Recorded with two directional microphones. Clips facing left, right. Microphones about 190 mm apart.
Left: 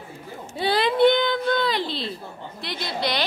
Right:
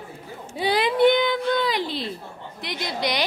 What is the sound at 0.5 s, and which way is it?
Speech, 15° right (ahead or behind).